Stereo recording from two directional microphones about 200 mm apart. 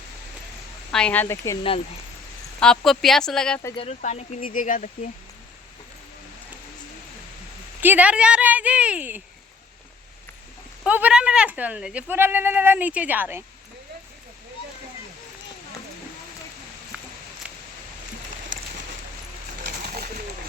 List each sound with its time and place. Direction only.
0.9 s speech: 5° left (ahead or behind)
2.6 s speech: centre (ahead or behind)
3.8 s speech: 35° left (ahead or behind)
7.8 s speech: 10° right (ahead or behind)
10.8 s speech: 5° right (ahead or behind)
19.6 s pigeon: 45° right (ahead or behind)